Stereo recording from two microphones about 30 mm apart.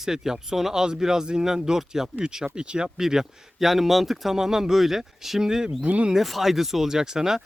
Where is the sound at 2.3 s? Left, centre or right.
Right.